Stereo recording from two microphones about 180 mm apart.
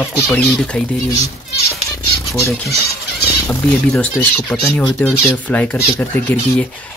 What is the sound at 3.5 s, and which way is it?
Speech, 15° left (ahead or behind).